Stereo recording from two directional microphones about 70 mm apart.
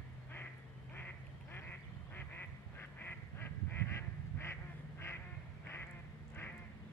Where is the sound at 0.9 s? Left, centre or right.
Left.